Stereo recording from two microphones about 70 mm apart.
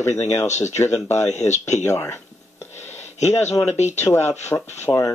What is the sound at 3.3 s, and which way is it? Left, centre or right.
Speech, left.